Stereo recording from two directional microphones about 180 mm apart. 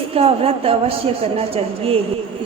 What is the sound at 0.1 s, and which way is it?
A man's voice, 30° right (ahead or behind).